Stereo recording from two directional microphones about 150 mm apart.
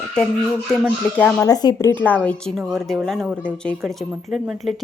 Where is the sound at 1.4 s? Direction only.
25° left (ahead or behind).